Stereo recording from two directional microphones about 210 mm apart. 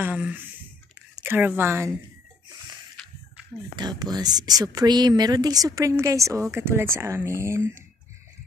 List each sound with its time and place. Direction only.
0.0 s speech: 10° right (ahead or behind)
3.7 s speech: 20° right (ahead or behind)